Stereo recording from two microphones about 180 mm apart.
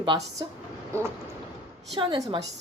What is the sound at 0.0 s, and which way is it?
Speech, 25° right (ahead or behind).